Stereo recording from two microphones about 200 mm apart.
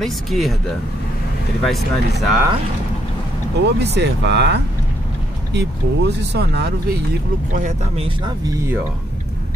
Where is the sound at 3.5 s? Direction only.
55° right (ahead or behind).